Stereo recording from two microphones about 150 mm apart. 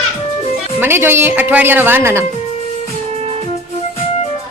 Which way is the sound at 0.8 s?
15° right (ahead or behind).